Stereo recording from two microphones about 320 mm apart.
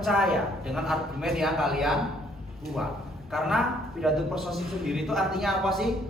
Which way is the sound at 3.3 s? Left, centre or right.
Centre.